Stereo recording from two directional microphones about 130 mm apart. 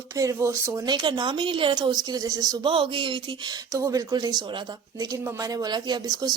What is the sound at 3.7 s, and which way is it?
Speech, 25° right (ahead or behind).